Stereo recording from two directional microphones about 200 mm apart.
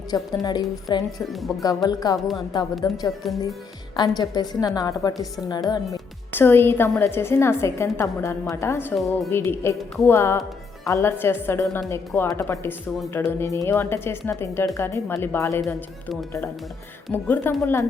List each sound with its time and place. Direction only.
0.1 s a woman's voice: 20° left (ahead or behind)
1.3 s speech: centre (ahead or behind)
1.6 s a woman's voice: 20° left (ahead or behind)
2.1 s speech: centre (ahead or behind)
2.8 s a woman's voice: 20° left (ahead or behind)
3.2 s speech: centre (ahead or behind)
3.9 s a woman's voice: 20° left (ahead or behind)
9.0 s speech: centre (ahead or behind)
9.3 s a woman's voice: 10° left (ahead or behind)
17.1 s a woman's voice: 10° left (ahead or behind)